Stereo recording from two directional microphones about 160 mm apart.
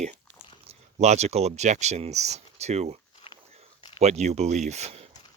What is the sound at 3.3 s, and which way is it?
Biting, 35° left (ahead or behind).